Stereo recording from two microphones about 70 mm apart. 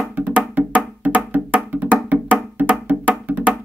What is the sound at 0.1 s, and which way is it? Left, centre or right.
Music, right.